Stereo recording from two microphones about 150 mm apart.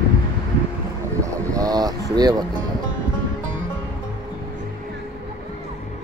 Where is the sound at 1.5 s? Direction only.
25° right (ahead or behind).